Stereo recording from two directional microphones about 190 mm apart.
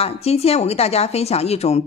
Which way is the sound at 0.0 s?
30° left (ahead or behind).